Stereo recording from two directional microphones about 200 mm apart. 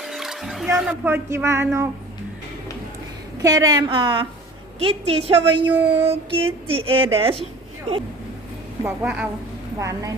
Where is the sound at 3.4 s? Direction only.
15° right (ahead or behind).